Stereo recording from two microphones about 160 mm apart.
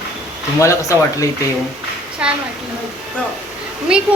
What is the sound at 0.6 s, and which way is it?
Speech, 20° left (ahead or behind).